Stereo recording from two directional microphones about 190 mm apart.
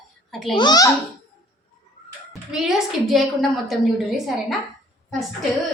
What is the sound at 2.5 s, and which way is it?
A woman's voice, centre (ahead or behind).